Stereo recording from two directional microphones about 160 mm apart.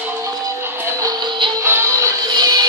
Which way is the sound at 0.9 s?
20° right (ahead or behind).